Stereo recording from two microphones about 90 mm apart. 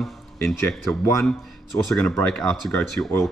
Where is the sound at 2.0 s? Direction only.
10° left (ahead or behind).